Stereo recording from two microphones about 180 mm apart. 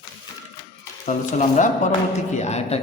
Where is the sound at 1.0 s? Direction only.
45° left (ahead or behind).